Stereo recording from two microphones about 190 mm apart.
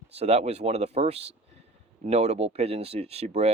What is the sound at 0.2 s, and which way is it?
Speech, 35° right (ahead or behind).